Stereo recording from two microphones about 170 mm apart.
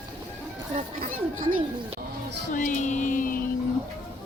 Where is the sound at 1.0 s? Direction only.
55° right (ahead or behind).